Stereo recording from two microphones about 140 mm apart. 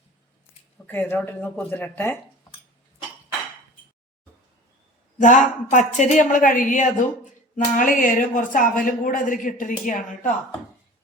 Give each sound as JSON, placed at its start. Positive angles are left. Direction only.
{"t": 0.9, "sound": "speech", "side_deg": 15}
{"t": 5.2, "sound": "a woman's voice", "side_deg": 65}